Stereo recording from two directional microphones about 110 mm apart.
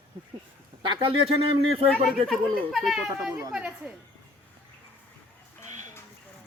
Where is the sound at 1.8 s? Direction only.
60° right (ahead or behind).